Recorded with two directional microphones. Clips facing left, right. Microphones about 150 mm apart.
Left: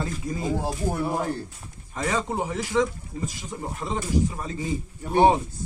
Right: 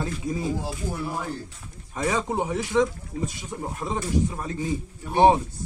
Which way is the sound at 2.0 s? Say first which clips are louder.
Right 1 dB; 5° right (ahead or behind).